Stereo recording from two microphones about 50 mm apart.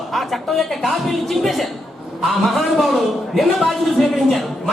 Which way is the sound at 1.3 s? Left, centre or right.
Centre.